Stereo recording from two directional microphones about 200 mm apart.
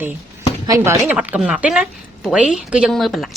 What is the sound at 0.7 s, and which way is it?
A man's voice, 10° right (ahead or behind).